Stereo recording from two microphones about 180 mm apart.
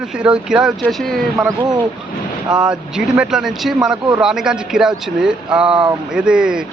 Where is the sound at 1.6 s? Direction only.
25° right (ahead or behind).